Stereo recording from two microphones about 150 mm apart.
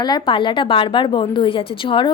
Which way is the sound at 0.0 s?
30° left (ahead or behind).